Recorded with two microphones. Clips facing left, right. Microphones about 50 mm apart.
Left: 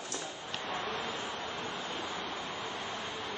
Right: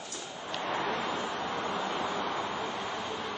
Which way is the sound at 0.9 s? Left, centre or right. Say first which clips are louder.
Right 5 dB; right.